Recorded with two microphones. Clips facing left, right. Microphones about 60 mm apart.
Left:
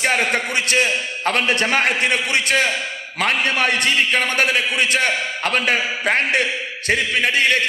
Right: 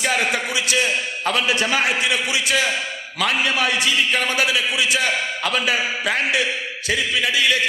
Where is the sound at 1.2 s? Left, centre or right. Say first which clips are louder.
Left 2 dB; left.